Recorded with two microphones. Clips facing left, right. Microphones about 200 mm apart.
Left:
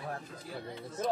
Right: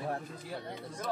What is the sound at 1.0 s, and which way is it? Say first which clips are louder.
Speech: left 4 dB; 25° left (ahead or behind).